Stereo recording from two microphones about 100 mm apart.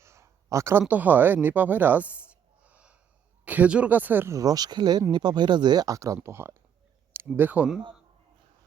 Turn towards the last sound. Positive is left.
turn(degrees=-15)  # may be behind; listen again after turning